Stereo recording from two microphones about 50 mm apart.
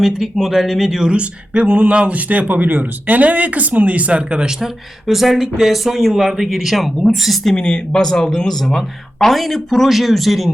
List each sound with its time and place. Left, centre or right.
0.0 s speech: centre
1.0 s speech: right
4.6 s speech: centre
7.5 s speech: centre